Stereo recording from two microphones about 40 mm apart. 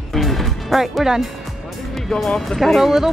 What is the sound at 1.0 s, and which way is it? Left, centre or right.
Speech, centre.